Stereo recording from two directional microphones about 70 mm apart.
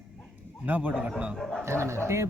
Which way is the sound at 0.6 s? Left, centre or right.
Right.